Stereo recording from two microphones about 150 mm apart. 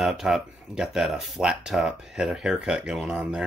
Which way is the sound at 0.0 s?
5° right (ahead or behind).